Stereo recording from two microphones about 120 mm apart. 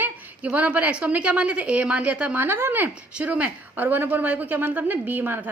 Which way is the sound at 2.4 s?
20° right (ahead or behind).